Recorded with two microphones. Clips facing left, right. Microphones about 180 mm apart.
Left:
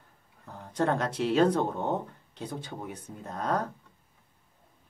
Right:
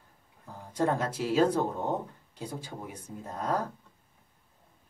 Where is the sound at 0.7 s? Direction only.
5° right (ahead or behind).